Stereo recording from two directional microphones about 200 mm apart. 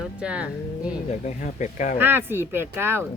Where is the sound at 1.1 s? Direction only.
35° left (ahead or behind).